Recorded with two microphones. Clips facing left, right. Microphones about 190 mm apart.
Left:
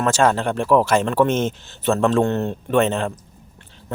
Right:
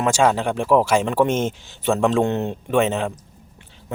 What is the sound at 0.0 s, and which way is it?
Speech, 10° right (ahead or behind).